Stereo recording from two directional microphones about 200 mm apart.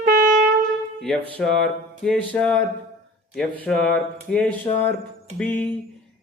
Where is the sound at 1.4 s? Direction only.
5° left (ahead or behind).